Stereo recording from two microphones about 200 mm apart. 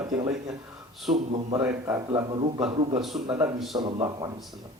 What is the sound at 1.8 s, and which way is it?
Speech, 15° right (ahead or behind).